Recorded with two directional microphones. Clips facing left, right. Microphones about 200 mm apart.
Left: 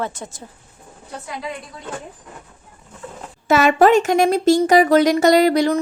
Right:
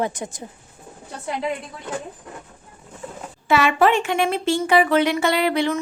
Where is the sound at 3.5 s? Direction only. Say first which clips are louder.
Left 4 dB; 40° left (ahead or behind).